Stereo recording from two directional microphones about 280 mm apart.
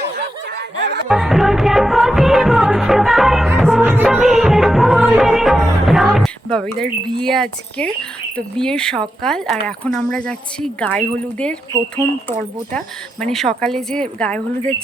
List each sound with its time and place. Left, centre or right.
0.2 s snicker: right
1.0 s music: centre
8.4 s speech: centre
12.7 s speech: centre